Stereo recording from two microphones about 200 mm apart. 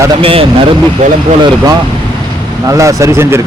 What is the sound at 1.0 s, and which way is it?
Speech, 35° right (ahead or behind).